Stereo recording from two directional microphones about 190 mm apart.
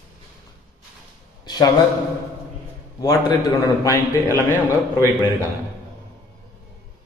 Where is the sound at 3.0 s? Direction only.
15° left (ahead or behind).